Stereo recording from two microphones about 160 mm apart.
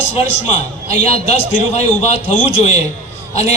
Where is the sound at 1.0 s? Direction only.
40° left (ahead or behind).